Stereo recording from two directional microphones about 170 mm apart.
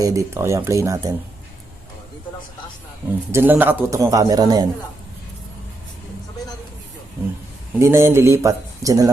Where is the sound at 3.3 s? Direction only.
10° right (ahead or behind).